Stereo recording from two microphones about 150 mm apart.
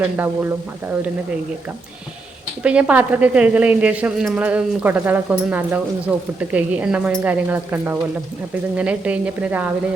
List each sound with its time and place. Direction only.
0.2 s speech: 15° right (ahead or behind)
2.6 s speech: 10° right (ahead or behind)